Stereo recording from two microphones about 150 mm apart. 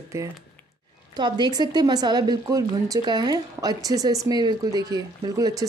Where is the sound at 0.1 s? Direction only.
20° right (ahead or behind).